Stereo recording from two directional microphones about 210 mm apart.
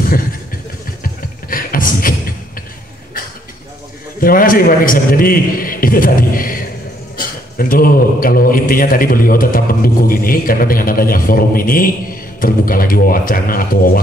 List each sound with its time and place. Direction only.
1.0 s music: 40° left (ahead or behind)
4.2 s a man's voice: 45° left (ahead or behind)